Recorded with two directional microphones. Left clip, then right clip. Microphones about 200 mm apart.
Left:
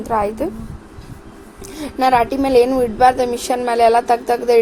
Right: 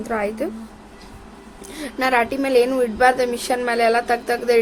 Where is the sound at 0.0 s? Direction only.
5° left (ahead or behind).